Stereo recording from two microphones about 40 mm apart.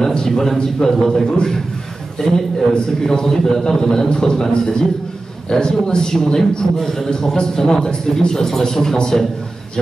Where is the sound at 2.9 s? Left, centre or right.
Centre.